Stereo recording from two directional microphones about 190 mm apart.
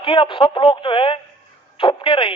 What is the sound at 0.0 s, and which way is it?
Speech, 25° left (ahead or behind).